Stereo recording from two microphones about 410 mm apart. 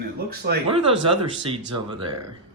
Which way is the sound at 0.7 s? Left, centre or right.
Centre.